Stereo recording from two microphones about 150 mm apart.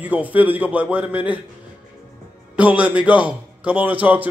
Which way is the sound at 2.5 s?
10° right (ahead or behind).